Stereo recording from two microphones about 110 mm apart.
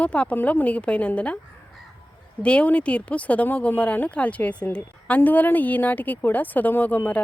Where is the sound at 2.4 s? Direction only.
10° left (ahead or behind).